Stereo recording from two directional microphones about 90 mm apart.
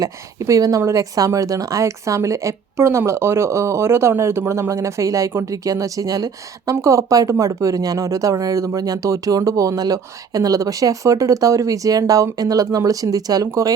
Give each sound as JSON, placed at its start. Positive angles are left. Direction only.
{"t": 0.0, "sound": "speech", "side_deg": -35}